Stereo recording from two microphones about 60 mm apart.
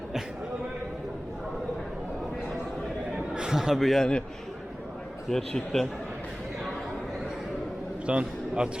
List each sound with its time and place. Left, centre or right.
3.3 s a man's voice: centre
5.3 s a man's voice: centre
8.0 s a man's voice: centre